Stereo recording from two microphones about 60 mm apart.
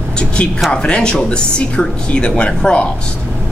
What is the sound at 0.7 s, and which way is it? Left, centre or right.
Speech, centre.